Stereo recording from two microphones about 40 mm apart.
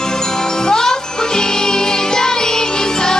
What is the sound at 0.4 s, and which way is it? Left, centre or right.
Music, centre.